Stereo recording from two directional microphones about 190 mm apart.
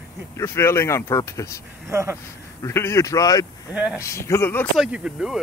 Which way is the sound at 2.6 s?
15° left (ahead or behind).